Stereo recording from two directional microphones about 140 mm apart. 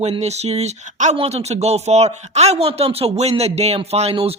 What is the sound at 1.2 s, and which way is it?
Speech, 45° right (ahead or behind).